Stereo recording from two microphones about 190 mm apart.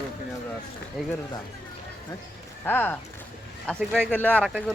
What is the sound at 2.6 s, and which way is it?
Speech, 10° left (ahead or behind).